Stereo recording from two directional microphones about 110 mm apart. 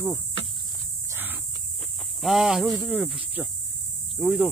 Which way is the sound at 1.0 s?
20° right (ahead or behind).